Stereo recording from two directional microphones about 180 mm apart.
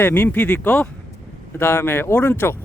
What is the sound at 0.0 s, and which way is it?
A man's voice, 10° left (ahead or behind).